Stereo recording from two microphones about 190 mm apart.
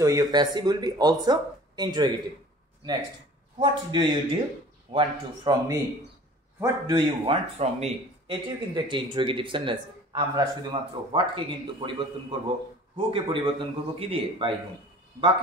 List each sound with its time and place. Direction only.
0.0 s a man's voice: 20° right (ahead or behind)
3.5 s a man's voice: 25° right (ahead or behind)